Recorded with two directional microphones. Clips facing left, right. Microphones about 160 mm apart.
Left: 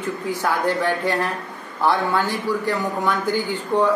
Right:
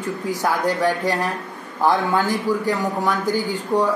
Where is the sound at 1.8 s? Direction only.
15° right (ahead or behind).